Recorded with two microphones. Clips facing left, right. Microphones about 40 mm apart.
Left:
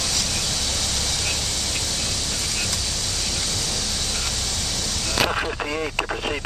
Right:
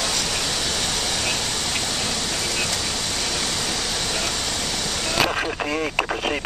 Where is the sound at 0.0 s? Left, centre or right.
Right.